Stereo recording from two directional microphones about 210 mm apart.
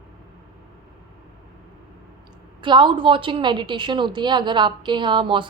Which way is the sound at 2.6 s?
20° right (ahead or behind).